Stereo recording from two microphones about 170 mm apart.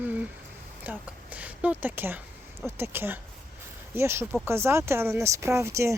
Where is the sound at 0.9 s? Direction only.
10° right (ahead or behind).